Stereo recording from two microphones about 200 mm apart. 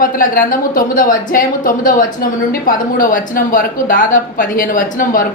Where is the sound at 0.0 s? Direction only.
45° left (ahead or behind).